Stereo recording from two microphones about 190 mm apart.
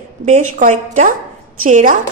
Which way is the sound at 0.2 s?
40° right (ahead or behind).